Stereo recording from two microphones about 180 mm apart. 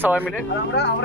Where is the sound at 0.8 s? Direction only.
70° left (ahead or behind).